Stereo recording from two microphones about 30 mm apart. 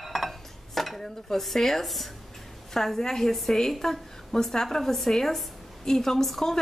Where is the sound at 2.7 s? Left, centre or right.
Centre.